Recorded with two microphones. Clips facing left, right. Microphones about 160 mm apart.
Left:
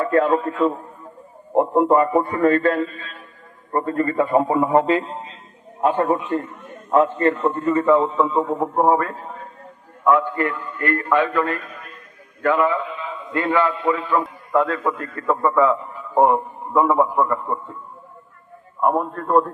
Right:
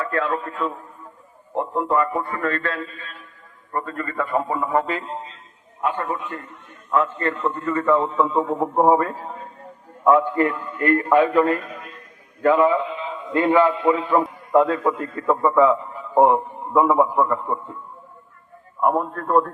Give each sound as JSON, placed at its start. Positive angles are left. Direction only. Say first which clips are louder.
{"t": 0.0, "sound": "a man's voice", "louder": "left 6 dB", "side_deg": 25}
{"t": 1.5, "sound": "a man's voice", "louder": "left 6 dB", "side_deg": 25}
{"t": 3.7, "sound": "a man's voice", "louder": "left 7 dB", "side_deg": 30}
{"t": 5.8, "sound": "a man's voice", "louder": "left 6 dB", "side_deg": 35}
{"t": 8.1, "sound": "a man's voice", "louder": "left 1 dB", "side_deg": 0}
{"t": 10.0, "sound": "a man's voice", "louder": "right 2 dB", "side_deg": -25}
{"t": 15.3, "sound": "a man's voice", "louder": "right 1 dB", "side_deg": -5}
{"t": 18.8, "sound": "a man's voice", "louder": "left 1 dB", "side_deg": 0}